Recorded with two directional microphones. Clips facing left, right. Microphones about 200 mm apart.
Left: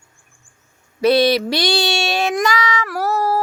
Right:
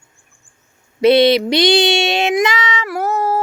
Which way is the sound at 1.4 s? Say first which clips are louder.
Right 6 dB; 20° right (ahead or behind).